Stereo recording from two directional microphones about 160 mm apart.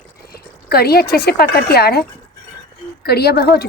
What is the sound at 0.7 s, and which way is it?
A woman's voice, 75° left (ahead or behind).